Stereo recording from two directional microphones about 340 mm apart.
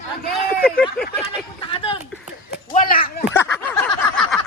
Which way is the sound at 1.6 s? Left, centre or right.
Centre.